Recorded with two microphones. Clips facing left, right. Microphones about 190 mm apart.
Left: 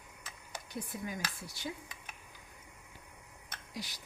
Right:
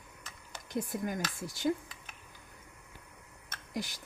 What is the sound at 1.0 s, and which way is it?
Speech, 50° right (ahead or behind).